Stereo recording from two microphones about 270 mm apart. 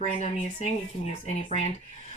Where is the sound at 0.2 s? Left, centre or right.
Left.